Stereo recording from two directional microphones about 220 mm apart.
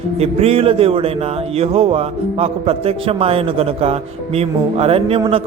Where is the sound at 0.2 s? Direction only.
25° right (ahead or behind).